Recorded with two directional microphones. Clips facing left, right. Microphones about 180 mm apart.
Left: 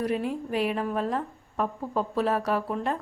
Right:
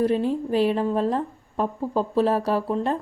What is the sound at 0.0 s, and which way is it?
A woman's voice, 30° right (ahead or behind).